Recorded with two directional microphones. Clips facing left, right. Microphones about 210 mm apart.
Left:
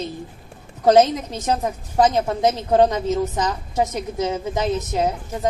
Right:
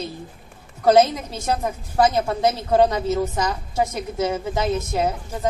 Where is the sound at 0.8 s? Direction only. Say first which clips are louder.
Left 1 dB; 15° left (ahead or behind).